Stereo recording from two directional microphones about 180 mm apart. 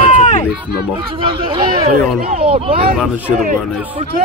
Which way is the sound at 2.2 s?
55° right (ahead or behind).